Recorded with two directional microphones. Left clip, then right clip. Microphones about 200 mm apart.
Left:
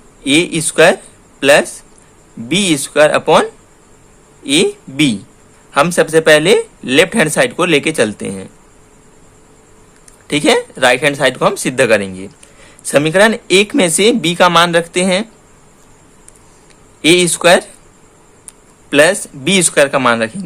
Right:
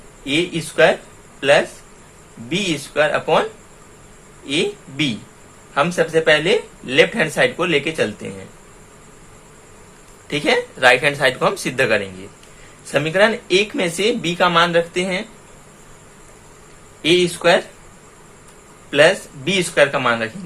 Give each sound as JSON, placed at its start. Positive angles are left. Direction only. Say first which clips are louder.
{"t": 0.3, "sound": "speech", "louder": "left 7 dB", "side_deg": 50}
{"t": 4.4, "sound": "speech", "louder": "left 8 dB", "side_deg": 50}
{"t": 10.2, "sound": "a man's voice", "louder": "left 6 dB", "side_deg": 45}
{"t": 17.0, "sound": "speech", "louder": "left 6 dB", "side_deg": 50}
{"t": 18.9, "sound": "speech", "louder": "left 3 dB", "side_deg": 45}